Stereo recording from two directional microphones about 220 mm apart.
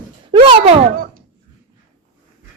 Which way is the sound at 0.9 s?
40° right (ahead or behind).